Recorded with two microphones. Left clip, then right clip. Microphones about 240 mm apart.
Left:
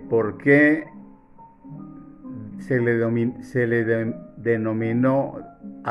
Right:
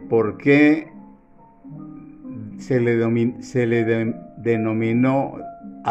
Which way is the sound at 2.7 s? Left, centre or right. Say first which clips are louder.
Right 2 dB; right.